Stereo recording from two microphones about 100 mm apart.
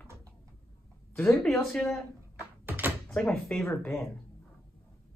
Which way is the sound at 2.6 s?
20° right (ahead or behind).